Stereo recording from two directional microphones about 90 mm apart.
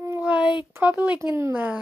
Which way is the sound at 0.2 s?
15° right (ahead or behind).